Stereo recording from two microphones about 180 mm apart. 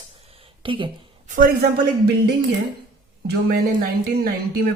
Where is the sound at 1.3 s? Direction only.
55° right (ahead or behind).